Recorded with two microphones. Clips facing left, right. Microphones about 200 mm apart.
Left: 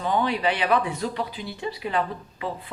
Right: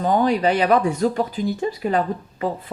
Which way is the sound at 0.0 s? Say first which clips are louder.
Right 6 dB; 45° right (ahead or behind).